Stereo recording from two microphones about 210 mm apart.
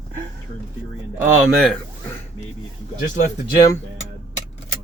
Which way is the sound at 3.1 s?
45° left (ahead or behind).